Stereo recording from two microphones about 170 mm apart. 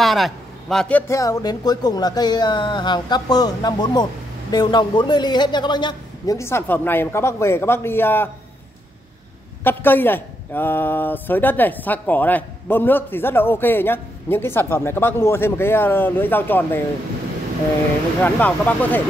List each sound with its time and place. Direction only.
0.0 s speech: centre (ahead or behind)
9.6 s a man's voice: 10° left (ahead or behind)
18.2 s a man's voice: 10° left (ahead or behind)